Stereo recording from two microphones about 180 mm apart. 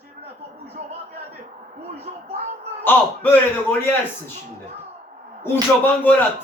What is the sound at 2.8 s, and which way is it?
Speech, 10° left (ahead or behind).